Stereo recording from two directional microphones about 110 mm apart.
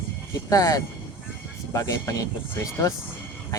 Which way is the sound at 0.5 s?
30° left (ahead or behind).